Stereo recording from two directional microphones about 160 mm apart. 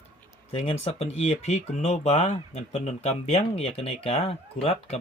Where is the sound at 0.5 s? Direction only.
40° left (ahead or behind).